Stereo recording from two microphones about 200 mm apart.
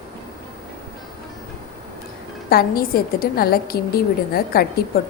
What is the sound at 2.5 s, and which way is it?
A woman's voice, 50° left (ahead or behind).